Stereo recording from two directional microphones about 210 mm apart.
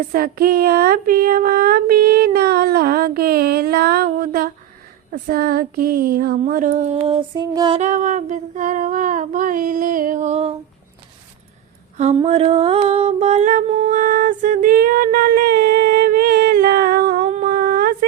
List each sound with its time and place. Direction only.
0.1 s female singing: 45° right (ahead or behind); by 7.8 s 20° right (ahead or behind)
7.8 s female singing: 35° right (ahead or behind)
11.9 s female singing: 30° right (ahead or behind); by 17.2 s 45° right (ahead or behind)
17.2 s humming: 35° right (ahead or behind)